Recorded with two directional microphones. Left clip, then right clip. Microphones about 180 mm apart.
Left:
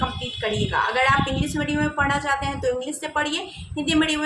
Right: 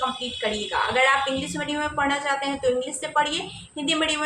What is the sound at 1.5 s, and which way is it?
A woman's voice, 15° left (ahead or behind).